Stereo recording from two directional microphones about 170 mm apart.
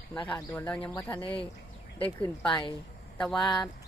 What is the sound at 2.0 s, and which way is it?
Speech, 10° left (ahead or behind).